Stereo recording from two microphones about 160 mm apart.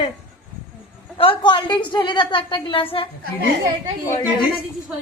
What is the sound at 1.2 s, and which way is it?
A woman's voice, 30° left (ahead or behind).